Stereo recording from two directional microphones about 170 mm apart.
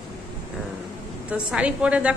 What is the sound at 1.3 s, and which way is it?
Speech, 5° right (ahead or behind).